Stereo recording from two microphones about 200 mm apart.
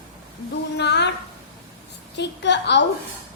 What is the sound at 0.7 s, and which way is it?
Speech, 60° left (ahead or behind).